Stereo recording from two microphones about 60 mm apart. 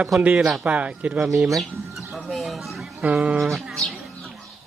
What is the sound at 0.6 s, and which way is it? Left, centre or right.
Speech, right.